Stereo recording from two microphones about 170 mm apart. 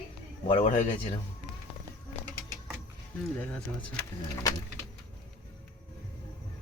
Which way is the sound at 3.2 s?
5° left (ahead or behind).